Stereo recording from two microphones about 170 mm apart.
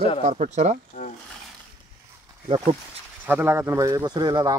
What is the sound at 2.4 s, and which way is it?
Speech, 30° right (ahead or behind).